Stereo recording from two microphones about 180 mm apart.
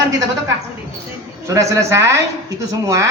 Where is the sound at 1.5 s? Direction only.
15° right (ahead or behind).